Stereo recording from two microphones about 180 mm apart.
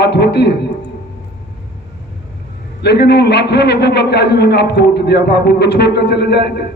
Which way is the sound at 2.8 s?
65° left (ahead or behind).